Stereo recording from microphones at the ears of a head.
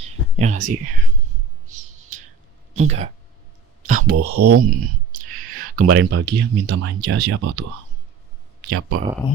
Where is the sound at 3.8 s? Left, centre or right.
Right.